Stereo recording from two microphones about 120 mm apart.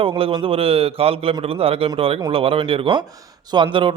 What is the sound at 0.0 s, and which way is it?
A man's voice, 50° right (ahead or behind).